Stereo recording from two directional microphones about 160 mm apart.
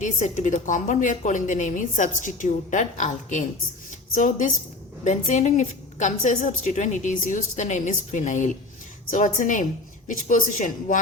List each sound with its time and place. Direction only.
0.0 s a woman's voice: 50° left (ahead or behind)